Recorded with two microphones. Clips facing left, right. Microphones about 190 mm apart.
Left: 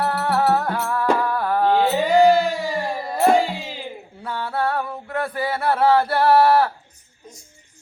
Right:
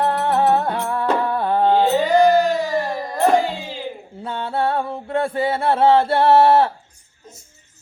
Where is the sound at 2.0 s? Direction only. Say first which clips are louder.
Left 2 dB; 10° left (ahead or behind).